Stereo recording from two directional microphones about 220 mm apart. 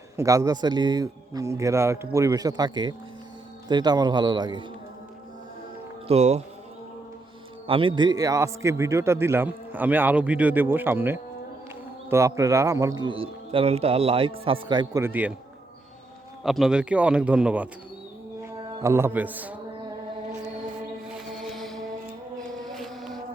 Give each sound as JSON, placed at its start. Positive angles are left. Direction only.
{"t": 0.2, "sound": "a man's voice", "side_deg": -15}
{"t": 6.1, "sound": "a man's voice", "side_deg": -30}
{"t": 7.7, "sound": "a man's voice", "side_deg": -25}
{"t": 16.4, "sound": "a man's voice", "side_deg": 0}
{"t": 21.1, "sound": "mantra", "side_deg": 0}
{"t": 22.4, "sound": "a sound", "side_deg": 0}